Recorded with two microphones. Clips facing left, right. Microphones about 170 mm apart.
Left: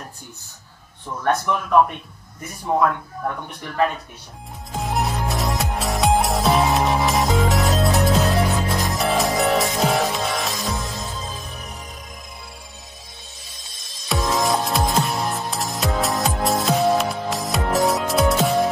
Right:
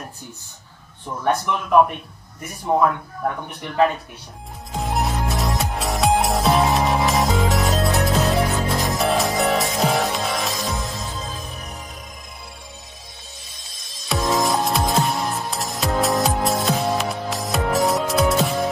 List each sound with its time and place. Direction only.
1.0 s speech: 15° right (ahead or behind)
4.7 s music: centre (ahead or behind)
13.5 s music: centre (ahead or behind)